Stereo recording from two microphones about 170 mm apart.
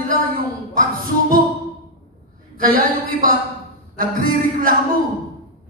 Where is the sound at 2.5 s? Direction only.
55° right (ahead or behind).